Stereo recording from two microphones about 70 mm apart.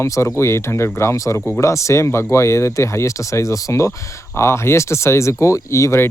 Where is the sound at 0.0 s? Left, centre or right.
Left.